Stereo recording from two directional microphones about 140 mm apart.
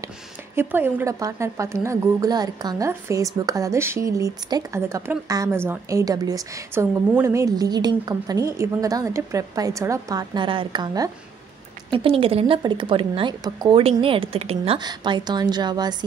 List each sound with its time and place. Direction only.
0.6 s a woman's voice: 15° right (ahead or behind); by 11.1 s 30° right (ahead or behind)
11.9 s a woman's voice: 40° right (ahead or behind)
14.8 s a woman's voice: 30° right (ahead or behind)